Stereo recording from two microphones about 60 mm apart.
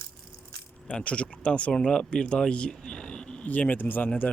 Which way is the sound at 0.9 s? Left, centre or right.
Centre.